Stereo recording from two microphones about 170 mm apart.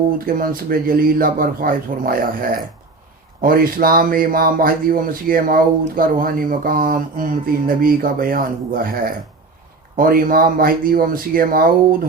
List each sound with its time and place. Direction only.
0.3 s speech: 55° right (ahead or behind)
3.4 s speech: 55° right (ahead or behind)